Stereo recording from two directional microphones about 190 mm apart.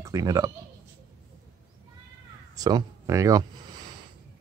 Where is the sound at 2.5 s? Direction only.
20° right (ahead or behind).